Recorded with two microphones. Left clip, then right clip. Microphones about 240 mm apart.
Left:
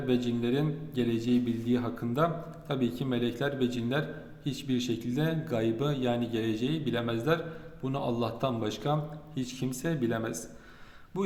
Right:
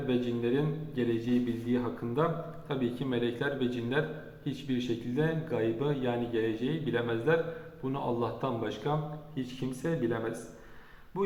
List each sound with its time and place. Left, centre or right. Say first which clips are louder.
0.1 s speech: left 1 dB; left